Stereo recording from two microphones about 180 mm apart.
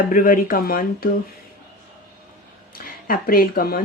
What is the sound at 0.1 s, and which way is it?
Speech, 50° left (ahead or behind).